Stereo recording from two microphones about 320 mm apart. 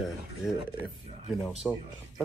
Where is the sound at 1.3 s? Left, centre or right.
Centre.